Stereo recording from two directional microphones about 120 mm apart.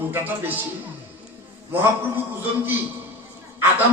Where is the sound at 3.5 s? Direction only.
20° right (ahead or behind).